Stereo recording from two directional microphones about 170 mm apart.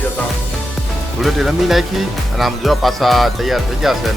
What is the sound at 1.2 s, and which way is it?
Speech, centre (ahead or behind).